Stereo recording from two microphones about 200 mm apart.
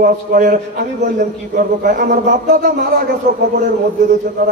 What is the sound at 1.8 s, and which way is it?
A man's voice, 40° right (ahead or behind).